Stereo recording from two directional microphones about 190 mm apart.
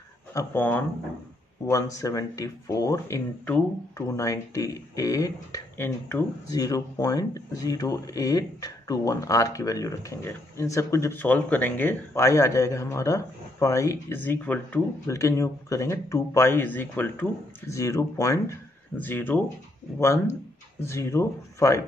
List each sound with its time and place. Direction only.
0.3 s speech: 15° left (ahead or behind)
20.8 s speech: 15° left (ahead or behind)